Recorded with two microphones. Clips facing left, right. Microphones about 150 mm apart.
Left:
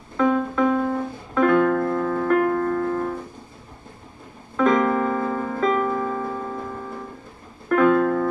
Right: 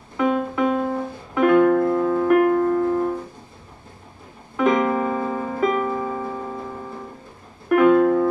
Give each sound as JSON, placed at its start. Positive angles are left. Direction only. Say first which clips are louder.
{"t": 0.2, "sound": "music", "louder": "left 1 dB", "side_deg": -15}
{"t": 4.6, "sound": "piano", "louder": "even", "side_deg": -15}
{"t": 7.6, "sound": "music", "louder": "right 3 dB", "side_deg": -15}